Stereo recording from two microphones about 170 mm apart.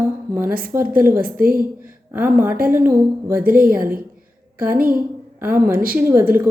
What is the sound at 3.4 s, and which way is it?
Speech, 55° right (ahead or behind).